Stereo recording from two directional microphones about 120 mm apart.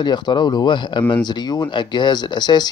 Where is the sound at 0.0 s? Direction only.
40° left (ahead or behind).